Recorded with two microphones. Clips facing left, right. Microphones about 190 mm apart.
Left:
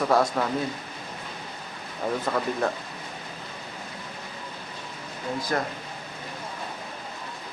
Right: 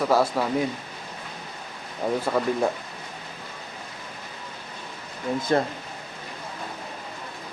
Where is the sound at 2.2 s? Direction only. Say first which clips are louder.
Right 3 dB; 10° right (ahead or behind).